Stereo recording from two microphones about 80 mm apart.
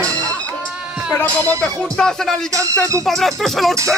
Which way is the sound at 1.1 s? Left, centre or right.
Left.